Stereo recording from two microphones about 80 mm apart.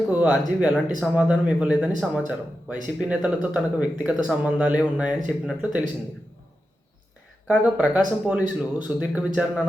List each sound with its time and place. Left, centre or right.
0.1 s speech: centre
7.5 s speech: centre